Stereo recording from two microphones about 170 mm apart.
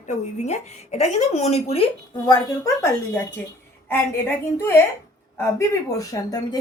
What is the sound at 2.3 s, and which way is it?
A woman's voice, 20° left (ahead or behind).